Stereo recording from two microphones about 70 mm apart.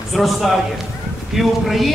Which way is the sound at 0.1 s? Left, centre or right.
Centre.